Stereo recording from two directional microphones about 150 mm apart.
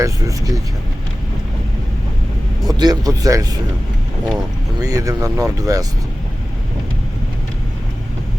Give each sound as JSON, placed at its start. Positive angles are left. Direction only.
{"t": 0.0, "sound": "speech", "side_deg": -25}
{"t": 2.6, "sound": "speech", "side_deg": -25}
{"t": 4.8, "sound": "speech", "side_deg": -25}